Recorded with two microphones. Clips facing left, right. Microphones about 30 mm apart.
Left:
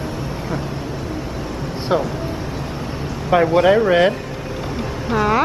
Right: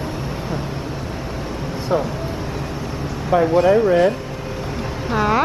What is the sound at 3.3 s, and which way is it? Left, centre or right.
Speech, left.